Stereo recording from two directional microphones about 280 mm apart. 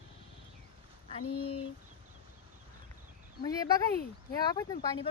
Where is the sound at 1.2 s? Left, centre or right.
Left.